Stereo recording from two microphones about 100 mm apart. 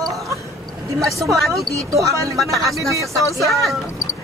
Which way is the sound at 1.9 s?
30° right (ahead or behind).